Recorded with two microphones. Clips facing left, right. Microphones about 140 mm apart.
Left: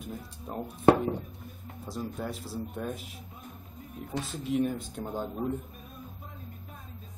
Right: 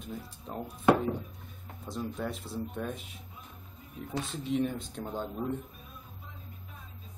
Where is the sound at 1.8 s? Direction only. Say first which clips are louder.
Even; 5° left (ahead or behind).